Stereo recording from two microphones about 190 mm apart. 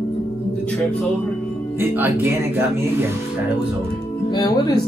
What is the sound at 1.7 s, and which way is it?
Speech, 10° right (ahead or behind).